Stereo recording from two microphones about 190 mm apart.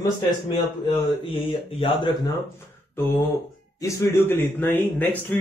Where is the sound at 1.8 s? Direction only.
25° left (ahead or behind).